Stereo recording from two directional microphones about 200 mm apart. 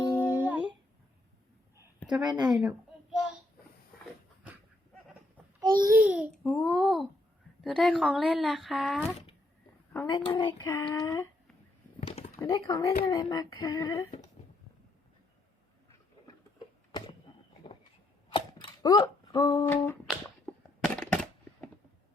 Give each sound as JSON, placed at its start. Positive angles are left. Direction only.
{"t": 0.2, "sound": "a sound", "side_deg": -10}
{"t": 2.2, "sound": "speech", "side_deg": -20}
{"t": 2.5, "sound": "a sound", "side_deg": 0}
{"t": 5.5, "sound": "babbling", "side_deg": -20}
{"t": 6.1, "sound": "speech", "side_deg": -5}
{"t": 10.1, "sound": "speech", "side_deg": 25}
{"t": 12.0, "sound": "typing", "side_deg": 30}
{"t": 12.4, "sound": "speech", "side_deg": 20}
{"t": 18.3, "sound": "a sound", "side_deg": 25}